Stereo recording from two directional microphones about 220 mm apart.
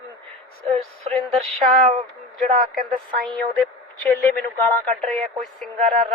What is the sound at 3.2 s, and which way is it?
Speech, centre (ahead or behind).